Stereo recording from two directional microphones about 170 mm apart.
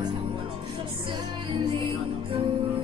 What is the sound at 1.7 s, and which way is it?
Music, 30° right (ahead or behind).